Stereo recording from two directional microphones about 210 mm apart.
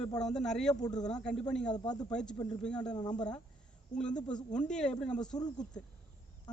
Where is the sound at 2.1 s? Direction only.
5° left (ahead or behind).